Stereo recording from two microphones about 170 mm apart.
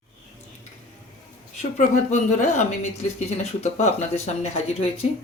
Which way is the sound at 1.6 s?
45° left (ahead or behind).